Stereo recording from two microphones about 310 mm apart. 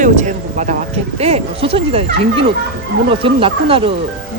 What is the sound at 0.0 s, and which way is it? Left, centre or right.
Speech, right.